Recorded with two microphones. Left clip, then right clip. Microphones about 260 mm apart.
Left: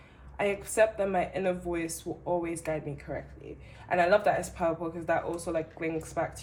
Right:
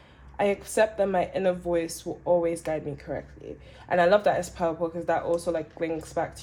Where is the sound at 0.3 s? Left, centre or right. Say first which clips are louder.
Right 3 dB; right.